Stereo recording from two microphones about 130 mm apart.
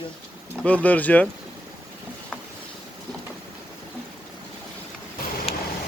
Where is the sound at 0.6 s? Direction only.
10° left (ahead or behind).